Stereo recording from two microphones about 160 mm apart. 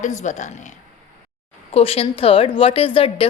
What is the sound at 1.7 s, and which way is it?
A woman's voice, 35° left (ahead or behind).